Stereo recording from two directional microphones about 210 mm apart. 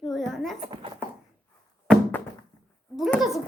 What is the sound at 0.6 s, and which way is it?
Speech, 25° right (ahead or behind).